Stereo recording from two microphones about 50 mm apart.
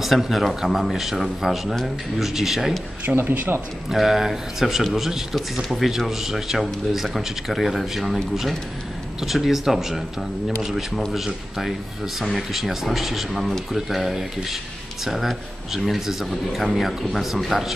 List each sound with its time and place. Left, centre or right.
0.0 s speech: centre
3.2 s a man's voice: right
3.9 s speech: centre